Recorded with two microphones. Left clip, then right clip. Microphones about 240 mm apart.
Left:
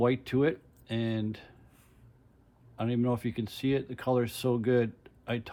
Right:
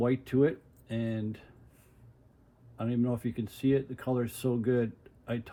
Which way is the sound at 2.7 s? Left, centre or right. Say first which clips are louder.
Left 2 dB; left.